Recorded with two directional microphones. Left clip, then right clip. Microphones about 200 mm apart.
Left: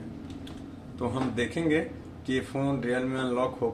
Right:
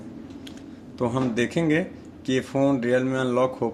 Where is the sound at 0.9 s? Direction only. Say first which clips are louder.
Right 5 dB; 50° right (ahead or behind).